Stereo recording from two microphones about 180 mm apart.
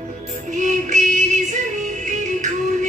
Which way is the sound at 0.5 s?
45° right (ahead or behind).